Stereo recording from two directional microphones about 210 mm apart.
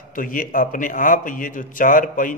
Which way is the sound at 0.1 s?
40° left (ahead or behind).